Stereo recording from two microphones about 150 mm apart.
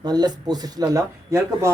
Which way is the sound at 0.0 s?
25° right (ahead or behind).